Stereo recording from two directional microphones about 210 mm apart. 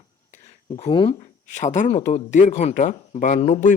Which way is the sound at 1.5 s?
35° left (ahead or behind).